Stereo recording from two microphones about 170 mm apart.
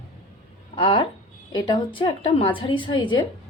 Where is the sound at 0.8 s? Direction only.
30° left (ahead or behind).